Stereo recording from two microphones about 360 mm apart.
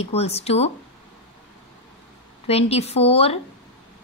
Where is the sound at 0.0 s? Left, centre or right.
Centre.